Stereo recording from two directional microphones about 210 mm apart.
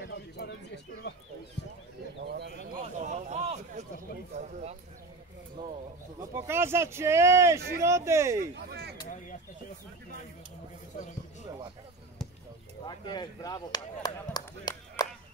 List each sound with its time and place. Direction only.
0.0 s bird: 55° left (ahead or behind)
2.2 s bird: 50° right (ahead or behind)
3.0 s a sound: 35° right (ahead or behind)
4.3 s speech: 35° right (ahead or behind)
6.3 s speech: 10° right (ahead or behind)
8.4 s speech: 50° right (ahead or behind)
12.8 s speech: 20° left (ahead or behind)